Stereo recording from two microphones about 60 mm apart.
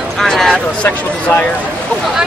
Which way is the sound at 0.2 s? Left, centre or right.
Centre.